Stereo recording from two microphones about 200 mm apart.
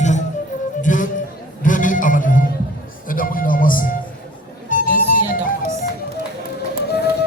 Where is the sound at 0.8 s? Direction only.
40° left (ahead or behind).